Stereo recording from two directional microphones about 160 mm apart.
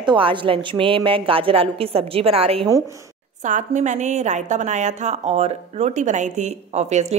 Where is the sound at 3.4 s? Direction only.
50° right (ahead or behind).